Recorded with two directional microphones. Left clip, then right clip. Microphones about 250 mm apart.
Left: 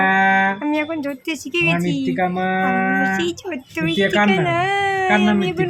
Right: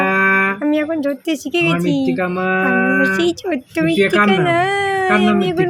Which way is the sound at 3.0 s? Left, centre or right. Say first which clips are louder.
Right 4 dB; centre.